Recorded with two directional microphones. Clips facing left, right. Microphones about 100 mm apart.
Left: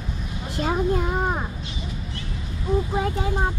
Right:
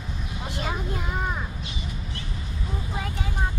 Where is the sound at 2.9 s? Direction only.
30° left (ahead or behind).